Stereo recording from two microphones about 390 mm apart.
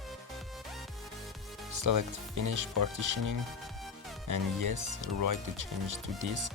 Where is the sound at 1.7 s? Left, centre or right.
Right.